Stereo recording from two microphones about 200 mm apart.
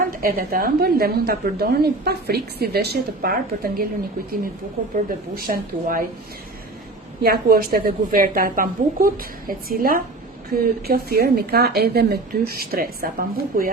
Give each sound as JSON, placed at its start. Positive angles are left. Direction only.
{"t": 0.0, "sound": "a woman's voice", "side_deg": -45}
{"t": 5.0, "sound": "a woman's voice", "side_deg": -45}
{"t": 7.2, "sound": "a woman's voice", "side_deg": -50}